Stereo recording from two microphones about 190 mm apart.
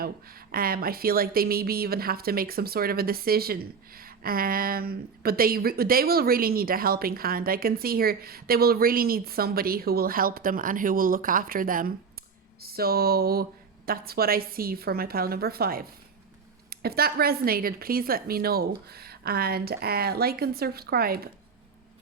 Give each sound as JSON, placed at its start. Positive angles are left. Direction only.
{"t": 0.0, "sound": "speech", "side_deg": -50}